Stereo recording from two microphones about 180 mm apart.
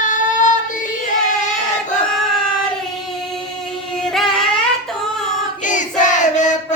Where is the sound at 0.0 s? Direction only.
45° left (ahead or behind).